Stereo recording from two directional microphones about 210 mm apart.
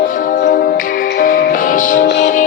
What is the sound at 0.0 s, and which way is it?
Music, 40° left (ahead or behind).